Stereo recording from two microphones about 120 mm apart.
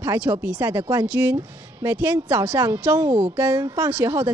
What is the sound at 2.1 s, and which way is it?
A woman's voice, 15° right (ahead or behind).